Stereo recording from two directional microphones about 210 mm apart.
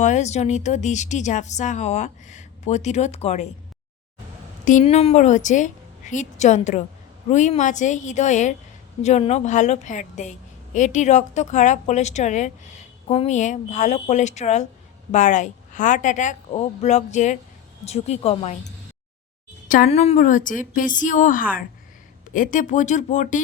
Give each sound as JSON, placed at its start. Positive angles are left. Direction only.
{"t": 0.0, "sound": "a woman's voice", "side_deg": 35}
{"t": 4.6, "sound": "a woman's voice", "side_deg": 35}